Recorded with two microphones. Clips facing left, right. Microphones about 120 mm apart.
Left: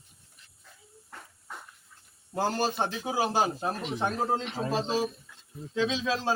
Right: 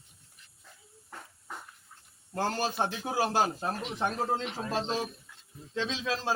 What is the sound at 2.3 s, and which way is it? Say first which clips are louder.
A man's voice: left 2 dB; 5° left (ahead or behind).